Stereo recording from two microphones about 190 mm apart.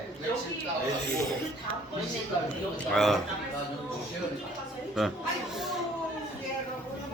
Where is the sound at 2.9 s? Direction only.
Centre (ahead or behind).